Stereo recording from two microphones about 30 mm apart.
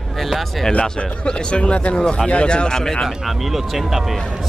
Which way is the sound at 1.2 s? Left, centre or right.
Left.